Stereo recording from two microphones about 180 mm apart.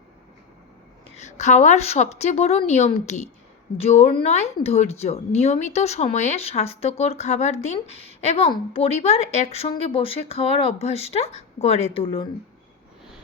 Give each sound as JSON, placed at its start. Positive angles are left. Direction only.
{"t": 1.1, "sound": "speech", "side_deg": 40}